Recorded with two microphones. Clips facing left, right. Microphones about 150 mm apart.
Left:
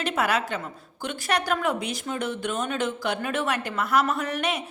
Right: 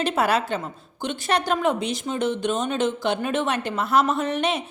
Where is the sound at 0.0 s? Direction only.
30° right (ahead or behind).